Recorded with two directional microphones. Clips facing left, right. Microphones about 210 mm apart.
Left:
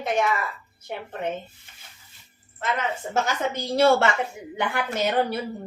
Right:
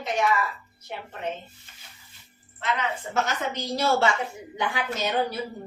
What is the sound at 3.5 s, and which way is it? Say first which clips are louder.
A woman's voice: left 9 dB; 60° left (ahead or behind).